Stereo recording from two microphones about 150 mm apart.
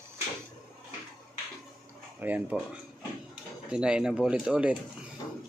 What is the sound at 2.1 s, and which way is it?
Speech, 10° right (ahead or behind).